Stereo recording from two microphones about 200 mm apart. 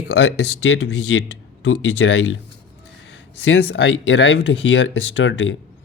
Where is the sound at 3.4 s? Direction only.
70° left (ahead or behind).